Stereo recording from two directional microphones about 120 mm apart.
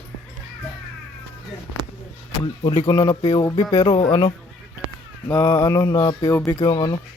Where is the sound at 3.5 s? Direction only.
45° left (ahead or behind).